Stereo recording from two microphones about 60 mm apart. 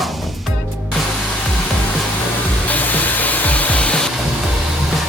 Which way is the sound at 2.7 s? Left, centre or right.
Left.